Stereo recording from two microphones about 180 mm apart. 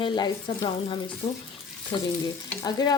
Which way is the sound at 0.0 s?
25° left (ahead or behind).